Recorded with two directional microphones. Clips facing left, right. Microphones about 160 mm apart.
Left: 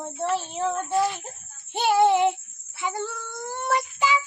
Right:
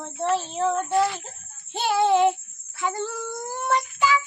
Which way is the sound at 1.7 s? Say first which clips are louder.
Left 1 dB; 15° left (ahead or behind).